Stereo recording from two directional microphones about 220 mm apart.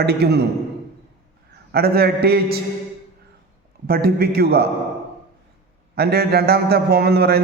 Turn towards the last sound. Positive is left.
turn(degrees=-45)  # may be behind; listen again after turning